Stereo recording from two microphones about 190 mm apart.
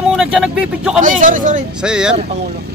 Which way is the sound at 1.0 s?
40° right (ahead or behind).